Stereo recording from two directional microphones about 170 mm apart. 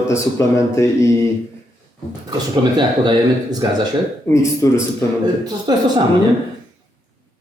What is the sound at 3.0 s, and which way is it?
Speech, 25° right (ahead or behind).